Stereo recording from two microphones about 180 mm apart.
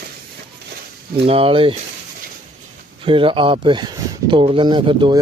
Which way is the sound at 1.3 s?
30° right (ahead or behind).